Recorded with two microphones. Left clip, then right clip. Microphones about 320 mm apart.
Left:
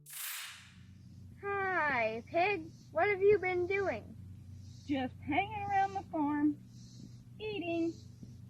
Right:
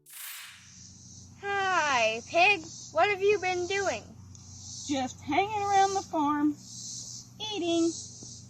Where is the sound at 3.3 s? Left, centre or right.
Centre.